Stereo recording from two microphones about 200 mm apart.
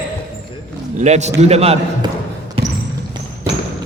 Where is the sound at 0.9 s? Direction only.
35° right (ahead or behind).